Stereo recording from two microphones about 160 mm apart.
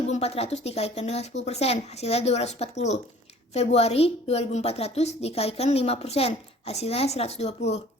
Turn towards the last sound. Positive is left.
turn(degrees=40)  # may be behind; listen again after turning